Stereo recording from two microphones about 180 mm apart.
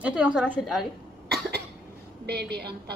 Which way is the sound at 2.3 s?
65° right (ahead or behind).